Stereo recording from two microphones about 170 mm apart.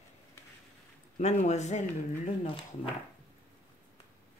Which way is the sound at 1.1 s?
40° left (ahead or behind).